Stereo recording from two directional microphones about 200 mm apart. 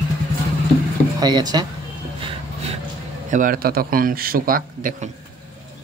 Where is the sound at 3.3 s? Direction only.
40° right (ahead or behind).